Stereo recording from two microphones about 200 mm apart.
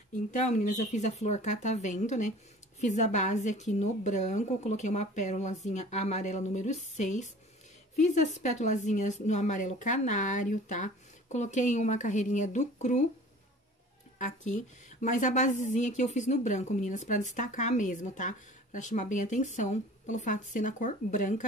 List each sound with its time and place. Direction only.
0.1 s speech: 35° left (ahead or behind)
14.1 s speech: 40° left (ahead or behind)